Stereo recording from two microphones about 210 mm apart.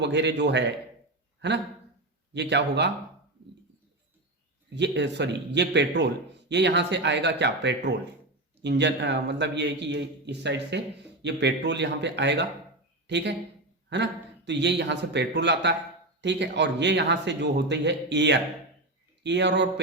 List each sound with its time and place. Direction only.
0.0 s a man's voice: 55° right (ahead or behind)
4.7 s a man's voice: 55° right (ahead or behind)